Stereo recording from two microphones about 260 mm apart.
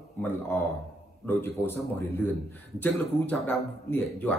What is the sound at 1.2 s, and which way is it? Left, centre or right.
Speech, centre.